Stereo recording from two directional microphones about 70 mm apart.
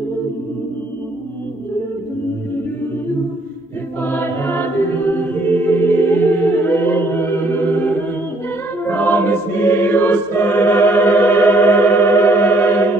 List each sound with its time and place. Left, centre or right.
4.0 s choir: left